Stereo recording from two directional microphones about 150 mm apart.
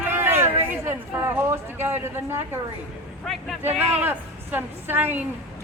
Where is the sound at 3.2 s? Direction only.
Centre (ahead or behind).